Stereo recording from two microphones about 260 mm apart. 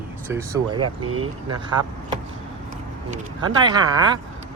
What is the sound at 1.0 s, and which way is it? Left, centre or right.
Speech, right.